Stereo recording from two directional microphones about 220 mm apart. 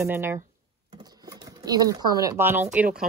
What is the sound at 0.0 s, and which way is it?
Speech, 10° right (ahead or behind).